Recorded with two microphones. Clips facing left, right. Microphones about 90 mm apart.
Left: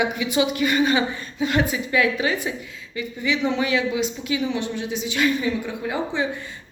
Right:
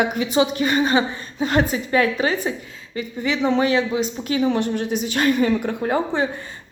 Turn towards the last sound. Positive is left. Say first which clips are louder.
# right 4 dB
turn(degrees=-45)  # may be behind; listen again after turning